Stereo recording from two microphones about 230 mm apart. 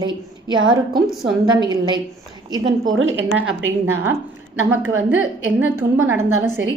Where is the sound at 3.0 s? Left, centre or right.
Right.